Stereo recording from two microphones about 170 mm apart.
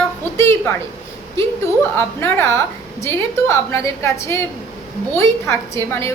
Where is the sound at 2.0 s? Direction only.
15° left (ahead or behind).